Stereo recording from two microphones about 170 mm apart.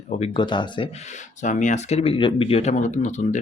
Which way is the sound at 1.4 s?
45° left (ahead or behind).